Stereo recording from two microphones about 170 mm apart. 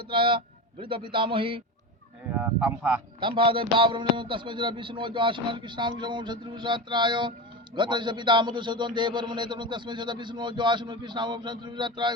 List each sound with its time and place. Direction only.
0.1 s a man's voice: 30° right (ahead or behind)
2.3 s speech: 10° right (ahead or behind)
3.2 s a man's voice: 30° right (ahead or behind)